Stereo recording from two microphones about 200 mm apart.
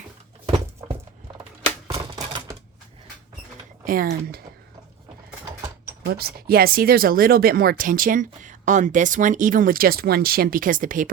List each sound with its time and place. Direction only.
0.4 s a sound: 25° right (ahead or behind)
1.9 s typewriter: 20° right (ahead or behind)
3.8 s speech: 45° right (ahead or behind)
6.1 s speech: 50° right (ahead or behind)